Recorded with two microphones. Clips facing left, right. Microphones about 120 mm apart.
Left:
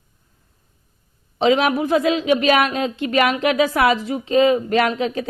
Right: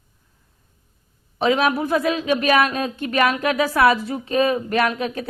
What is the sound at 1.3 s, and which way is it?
A man's voice, 25° left (ahead or behind).